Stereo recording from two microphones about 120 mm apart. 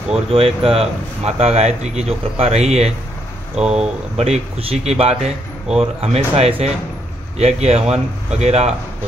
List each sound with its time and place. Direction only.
0.3 s speech: 50° right (ahead or behind)